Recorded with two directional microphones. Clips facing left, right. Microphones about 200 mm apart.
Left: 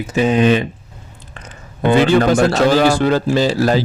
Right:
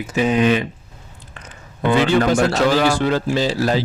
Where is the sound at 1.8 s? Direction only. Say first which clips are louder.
Left 3 dB; 40° left (ahead or behind).